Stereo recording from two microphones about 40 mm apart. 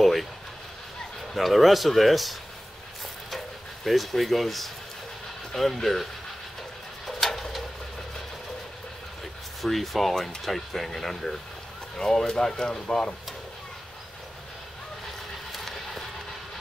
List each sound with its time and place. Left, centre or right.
0.0 s a sound: centre
1.3 s speech: centre
3.3 s stir: centre
5.5 s speech: centre
7.1 s pigeon: centre
9.6 s speech: centre; by 13.1 s left
15.5 s a sound: centre